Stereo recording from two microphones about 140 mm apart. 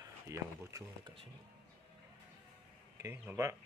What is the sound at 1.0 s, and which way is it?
Speech, 40° right (ahead or behind).